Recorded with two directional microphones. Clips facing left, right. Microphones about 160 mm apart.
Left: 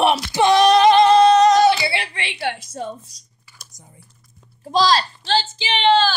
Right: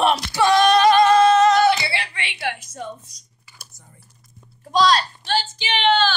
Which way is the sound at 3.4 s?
10° right (ahead or behind).